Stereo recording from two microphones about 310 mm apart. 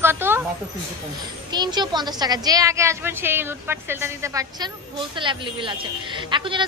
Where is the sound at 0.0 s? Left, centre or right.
Centre.